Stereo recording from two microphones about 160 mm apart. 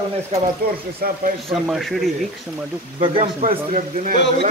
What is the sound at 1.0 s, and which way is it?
Speech, 65° right (ahead or behind).